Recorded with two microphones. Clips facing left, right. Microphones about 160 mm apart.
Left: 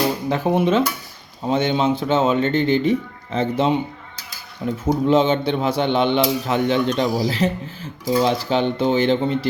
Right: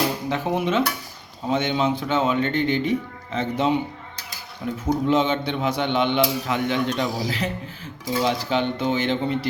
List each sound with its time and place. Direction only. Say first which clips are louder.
0.3 s a man's voice: left 5 dB; 35° left (ahead or behind)
4.9 s a man's voice: left 4 dB; 30° left (ahead or behind)